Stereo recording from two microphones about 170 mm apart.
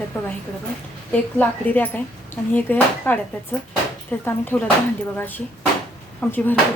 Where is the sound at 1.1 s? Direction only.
10° left (ahead or behind).